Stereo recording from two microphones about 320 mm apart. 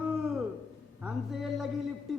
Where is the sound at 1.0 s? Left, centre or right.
Centre.